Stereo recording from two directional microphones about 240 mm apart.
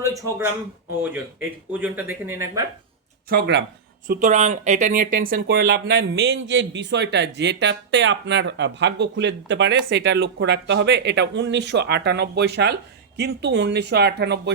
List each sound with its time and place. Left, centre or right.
0.0 s speech: centre
1.8 s speech: centre
3.2 s speech: right
4.0 s speech: right